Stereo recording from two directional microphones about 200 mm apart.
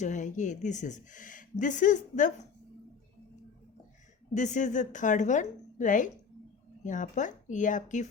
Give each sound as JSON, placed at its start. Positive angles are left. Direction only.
{"t": 0.0, "sound": "speech", "side_deg": 40}
{"t": 4.4, "sound": "speech", "side_deg": 35}